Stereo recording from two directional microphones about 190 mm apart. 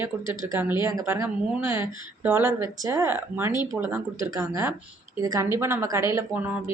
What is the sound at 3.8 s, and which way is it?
Speech, 15° right (ahead or behind).